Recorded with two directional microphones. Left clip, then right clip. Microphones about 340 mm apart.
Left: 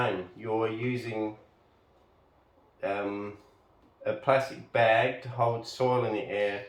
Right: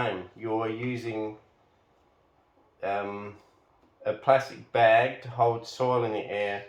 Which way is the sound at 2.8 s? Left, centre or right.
Centre.